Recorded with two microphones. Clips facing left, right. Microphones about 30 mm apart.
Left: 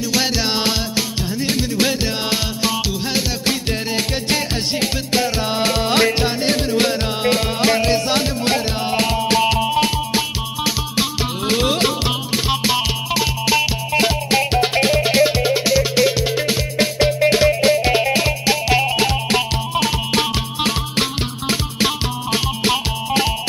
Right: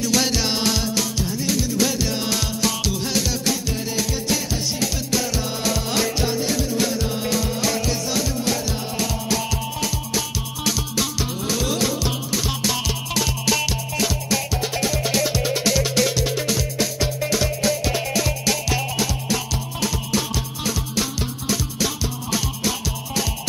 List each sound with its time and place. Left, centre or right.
0.0 s music: left
1.5 s music: left
3.9 s music: left
13.9 s music: left